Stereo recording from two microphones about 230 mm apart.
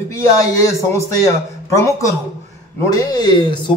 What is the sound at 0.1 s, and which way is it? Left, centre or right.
A man's voice, centre.